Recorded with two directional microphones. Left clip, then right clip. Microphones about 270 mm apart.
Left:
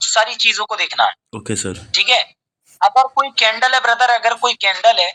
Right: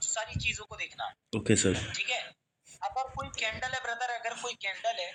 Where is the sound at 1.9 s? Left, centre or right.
Left.